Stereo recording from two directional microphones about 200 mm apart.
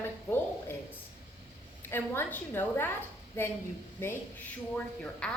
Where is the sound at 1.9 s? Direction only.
10° left (ahead or behind).